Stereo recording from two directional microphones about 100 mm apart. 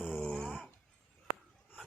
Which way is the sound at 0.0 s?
10° left (ahead or behind).